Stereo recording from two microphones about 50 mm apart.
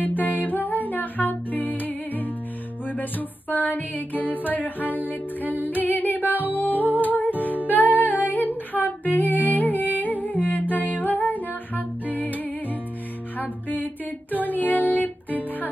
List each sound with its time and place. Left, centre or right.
0.0 s music: left
13.4 s music: left